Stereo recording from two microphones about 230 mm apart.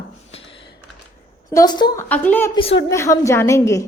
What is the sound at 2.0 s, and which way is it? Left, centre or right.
A woman's voice, centre.